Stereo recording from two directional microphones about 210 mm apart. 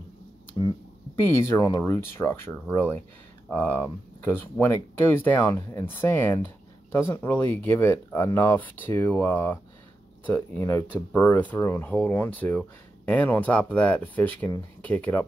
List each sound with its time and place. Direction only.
1.5 s speech: 15° left (ahead or behind)